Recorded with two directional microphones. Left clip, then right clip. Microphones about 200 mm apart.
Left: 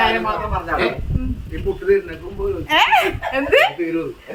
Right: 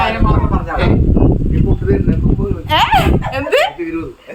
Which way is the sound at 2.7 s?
10° right (ahead or behind).